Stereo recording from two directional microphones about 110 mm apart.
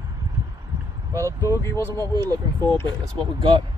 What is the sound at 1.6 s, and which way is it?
Speech, 25° left (ahead or behind).